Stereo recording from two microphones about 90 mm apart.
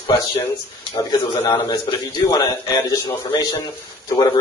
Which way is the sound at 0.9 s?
40° left (ahead or behind).